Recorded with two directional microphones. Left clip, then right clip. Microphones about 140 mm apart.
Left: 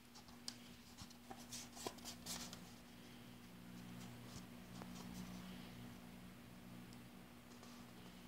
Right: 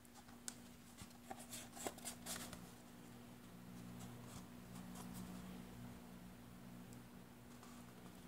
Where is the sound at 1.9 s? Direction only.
10° right (ahead or behind).